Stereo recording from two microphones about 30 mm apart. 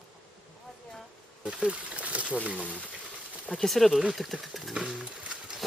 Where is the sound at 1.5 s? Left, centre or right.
Right.